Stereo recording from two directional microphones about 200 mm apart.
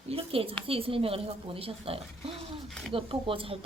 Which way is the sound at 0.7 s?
30° right (ahead or behind).